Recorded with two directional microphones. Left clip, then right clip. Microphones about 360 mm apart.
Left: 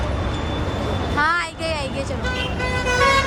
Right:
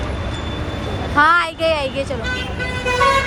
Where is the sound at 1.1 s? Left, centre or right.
Centre.